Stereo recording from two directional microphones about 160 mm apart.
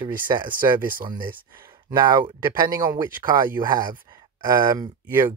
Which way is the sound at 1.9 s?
25° right (ahead or behind).